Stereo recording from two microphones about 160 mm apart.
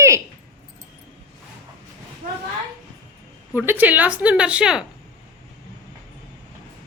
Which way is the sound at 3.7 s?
10° right (ahead or behind).